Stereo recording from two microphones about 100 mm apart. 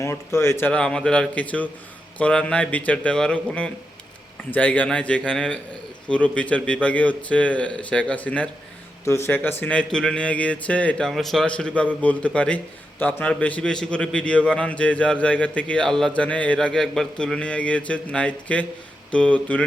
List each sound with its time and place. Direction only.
0.0 s speech: 25° left (ahead or behind)
0.7 s a man's voice: 10° left (ahead or behind)
9.0 s a man's voice: 25° left (ahead or behind)
11.1 s a man's voice: centre (ahead or behind)